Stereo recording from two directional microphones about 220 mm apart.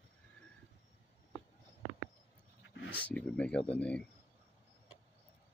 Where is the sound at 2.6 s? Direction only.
55° left (ahead or behind).